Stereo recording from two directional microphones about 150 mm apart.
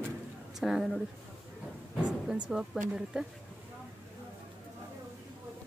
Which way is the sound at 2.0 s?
5° right (ahead or behind).